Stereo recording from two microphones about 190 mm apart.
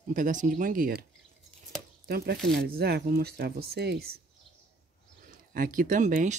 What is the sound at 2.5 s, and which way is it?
Speech, 55° right (ahead or behind).